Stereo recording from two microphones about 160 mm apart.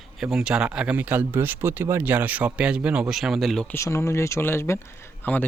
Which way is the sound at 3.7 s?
15° left (ahead or behind).